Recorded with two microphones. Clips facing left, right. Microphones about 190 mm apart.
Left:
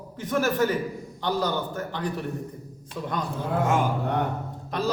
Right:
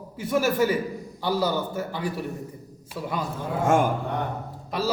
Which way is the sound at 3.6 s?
50° right (ahead or behind).